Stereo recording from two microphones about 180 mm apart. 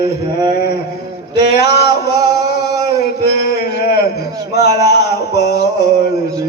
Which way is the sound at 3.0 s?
65° left (ahead or behind).